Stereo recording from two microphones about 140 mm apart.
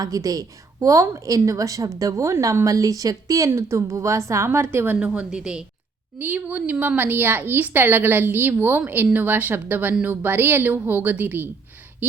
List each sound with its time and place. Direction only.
0.0 s a woman's voice: 25° right (ahead or behind)